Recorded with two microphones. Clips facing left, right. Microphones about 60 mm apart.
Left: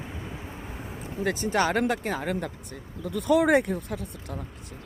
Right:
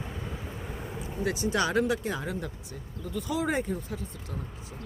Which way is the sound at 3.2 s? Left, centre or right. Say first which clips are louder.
Left 9 dB; left.